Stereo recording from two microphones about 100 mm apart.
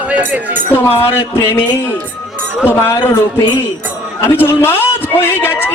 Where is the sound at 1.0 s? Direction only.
25° left (ahead or behind).